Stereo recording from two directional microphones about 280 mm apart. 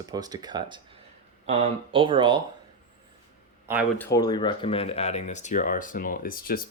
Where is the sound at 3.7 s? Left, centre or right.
Centre.